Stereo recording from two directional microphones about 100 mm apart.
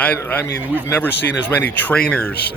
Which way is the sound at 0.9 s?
20° left (ahead or behind).